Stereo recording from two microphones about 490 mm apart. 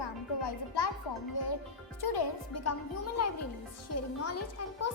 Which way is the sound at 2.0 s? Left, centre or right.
Left.